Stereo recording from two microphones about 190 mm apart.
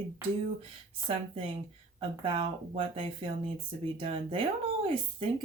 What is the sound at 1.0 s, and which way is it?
Speech, 30° right (ahead or behind).